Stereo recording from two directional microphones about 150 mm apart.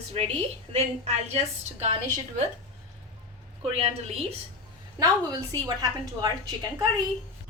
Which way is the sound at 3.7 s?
40° right (ahead or behind).